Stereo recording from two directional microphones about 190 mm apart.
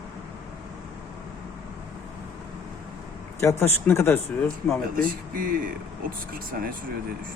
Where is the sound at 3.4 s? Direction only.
15° left (ahead or behind).